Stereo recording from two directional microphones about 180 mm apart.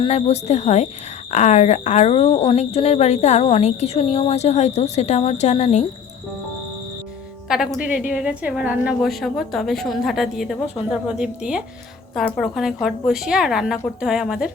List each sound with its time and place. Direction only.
0.0 s speech: 35° left (ahead or behind)
7.4 s a woman's voice: 5° right (ahead or behind)